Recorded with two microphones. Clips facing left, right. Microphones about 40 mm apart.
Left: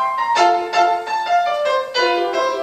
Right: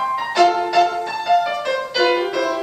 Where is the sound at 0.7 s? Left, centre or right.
Centre.